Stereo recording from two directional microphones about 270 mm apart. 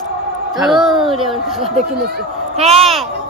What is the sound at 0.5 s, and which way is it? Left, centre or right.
Speech, centre.